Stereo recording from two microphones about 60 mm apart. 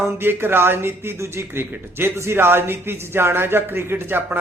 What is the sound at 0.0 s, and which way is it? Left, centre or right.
Speech, right.